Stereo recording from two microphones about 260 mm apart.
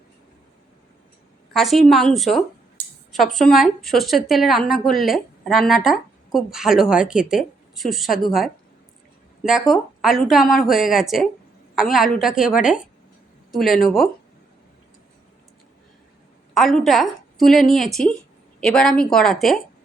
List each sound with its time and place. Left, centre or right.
1.5 s speech: centre
2.8 s a sound: right
3.3 s speech: centre
16.6 s a woman's voice: centre